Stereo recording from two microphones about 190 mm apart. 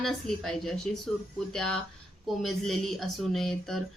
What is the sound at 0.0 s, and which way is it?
A woman's voice, centre (ahead or behind).